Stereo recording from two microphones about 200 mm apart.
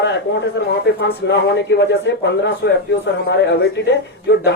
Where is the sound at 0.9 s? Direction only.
60° left (ahead or behind).